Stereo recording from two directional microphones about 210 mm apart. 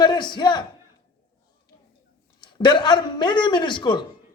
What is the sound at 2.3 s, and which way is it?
A man's voice, 20° left (ahead or behind).